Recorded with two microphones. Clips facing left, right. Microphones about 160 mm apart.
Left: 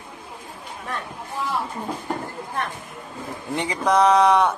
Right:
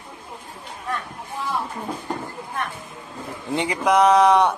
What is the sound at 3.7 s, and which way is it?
Speech, 10° right (ahead or behind).